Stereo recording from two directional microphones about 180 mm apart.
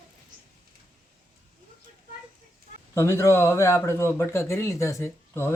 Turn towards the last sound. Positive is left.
turn(degrees=15)  # may be behind; listen again after turning